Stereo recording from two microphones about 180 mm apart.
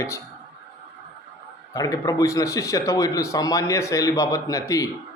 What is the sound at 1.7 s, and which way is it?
A man's voice, 20° left (ahead or behind).